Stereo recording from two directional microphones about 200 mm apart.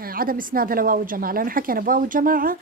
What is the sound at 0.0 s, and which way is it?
A woman's voice, 45° right (ahead or behind).